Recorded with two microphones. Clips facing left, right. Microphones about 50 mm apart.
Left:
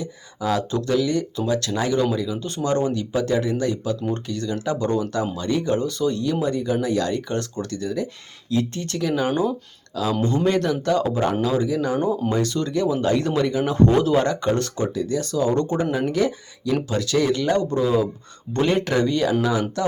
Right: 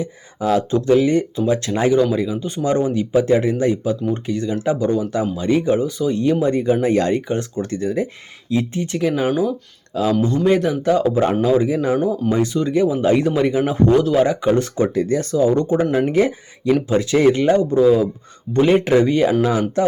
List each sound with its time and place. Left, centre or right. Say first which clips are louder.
0.0 s speech: right 5 dB; right
2.4 s speech: right 3 dB; centre
6.4 s speech: right 6 dB; right
7.2 s speech: right 4 dB; centre
10.4 s speech: right 5 dB; centre
13.8 s a man's voice: right 3 dB; centre
14.3 s speech: right 4 dB; centre
14.9 s speech: right 5 dB; right
15.4 s speech: right 5 dB; centre
16.0 s speech: right 5 dB; right
17.5 s speech: right 6 dB; centre